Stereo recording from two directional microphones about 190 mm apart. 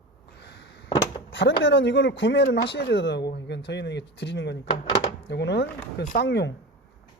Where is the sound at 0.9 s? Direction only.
25° left (ahead or behind).